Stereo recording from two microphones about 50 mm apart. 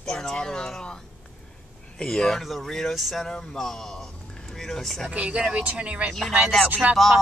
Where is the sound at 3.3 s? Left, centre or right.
Centre.